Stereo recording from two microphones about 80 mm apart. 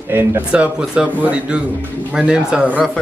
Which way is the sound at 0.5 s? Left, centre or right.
Centre.